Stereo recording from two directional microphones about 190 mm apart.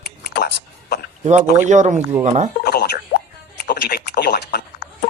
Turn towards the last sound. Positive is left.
turn(degrees=55)  # may be behind; listen again after turning